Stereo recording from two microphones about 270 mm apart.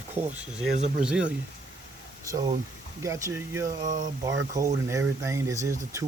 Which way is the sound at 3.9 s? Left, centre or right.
Right.